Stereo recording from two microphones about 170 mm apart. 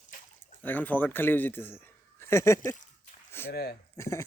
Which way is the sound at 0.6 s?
10° left (ahead or behind).